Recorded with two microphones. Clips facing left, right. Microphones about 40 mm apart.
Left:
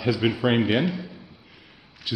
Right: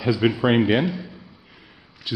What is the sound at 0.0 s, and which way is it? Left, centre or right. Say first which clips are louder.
Speech: right 3 dB; centre.